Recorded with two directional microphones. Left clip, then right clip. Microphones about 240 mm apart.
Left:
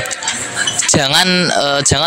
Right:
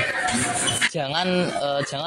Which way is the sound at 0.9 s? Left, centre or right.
Left.